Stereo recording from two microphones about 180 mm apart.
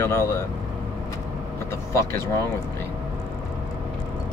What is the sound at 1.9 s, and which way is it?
Speech, 15° left (ahead or behind).